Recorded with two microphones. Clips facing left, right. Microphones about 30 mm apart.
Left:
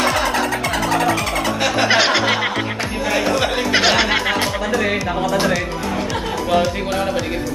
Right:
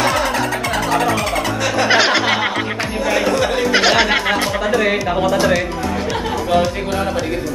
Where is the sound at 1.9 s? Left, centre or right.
Centre.